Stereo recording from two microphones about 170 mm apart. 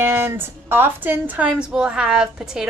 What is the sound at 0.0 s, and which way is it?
A woman's voice, 15° right (ahead or behind).